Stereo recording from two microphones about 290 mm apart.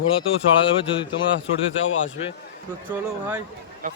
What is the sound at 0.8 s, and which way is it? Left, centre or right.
Speech, centre.